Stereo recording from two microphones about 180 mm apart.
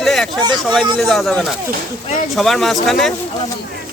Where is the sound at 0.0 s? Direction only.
Centre (ahead or behind).